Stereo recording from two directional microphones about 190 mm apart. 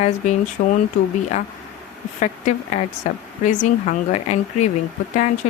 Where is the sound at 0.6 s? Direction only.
55° left (ahead or behind).